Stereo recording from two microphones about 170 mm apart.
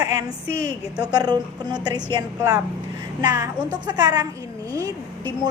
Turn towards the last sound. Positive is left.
turn(degrees=-20)  # may be behind; listen again after turning